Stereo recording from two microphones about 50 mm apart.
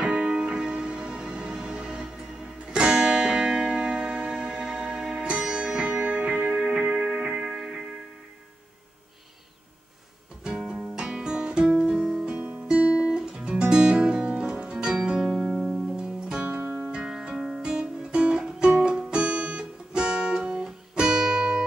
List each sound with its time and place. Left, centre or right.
0.0 s music: right
6.0 s music: right
6.5 s music: centre
10.6 s music: centre
11.0 s guitar: centre
12.4 s guitar: right
15.5 s music: centre
16.0 s music: centre
16.5 s music: right
16.9 s music: centre